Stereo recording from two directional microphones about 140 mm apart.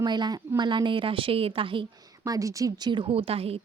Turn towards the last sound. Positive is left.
turn(degrees=-45)  # may be behind; listen again after turning